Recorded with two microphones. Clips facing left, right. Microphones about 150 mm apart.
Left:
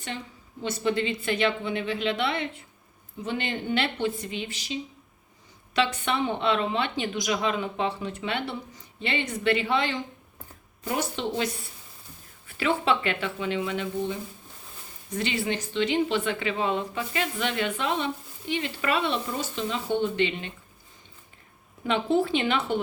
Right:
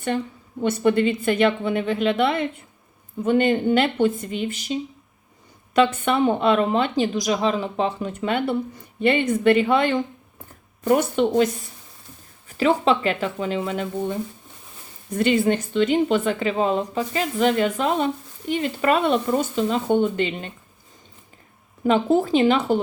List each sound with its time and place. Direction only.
0.6 s a woman's voice: 55° right (ahead or behind)
12.5 s a woman's voice: 35° right (ahead or behind)
21.8 s speech: 40° right (ahead or behind)